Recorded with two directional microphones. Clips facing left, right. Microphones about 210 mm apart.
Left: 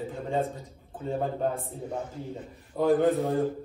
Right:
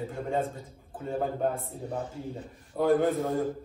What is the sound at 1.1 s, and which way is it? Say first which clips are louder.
Speech: even; centre (ahead or behind).